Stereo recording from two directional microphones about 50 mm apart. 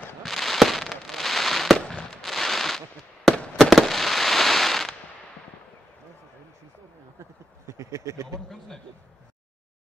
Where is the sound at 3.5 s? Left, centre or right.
Centre.